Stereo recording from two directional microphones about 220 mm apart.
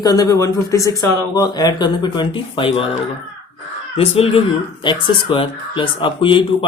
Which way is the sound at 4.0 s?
25° left (ahead or behind).